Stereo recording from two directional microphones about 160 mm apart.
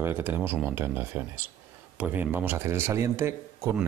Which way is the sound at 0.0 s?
15° right (ahead or behind).